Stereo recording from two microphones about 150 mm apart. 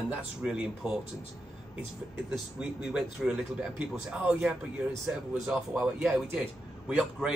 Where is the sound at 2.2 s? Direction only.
5° right (ahead or behind).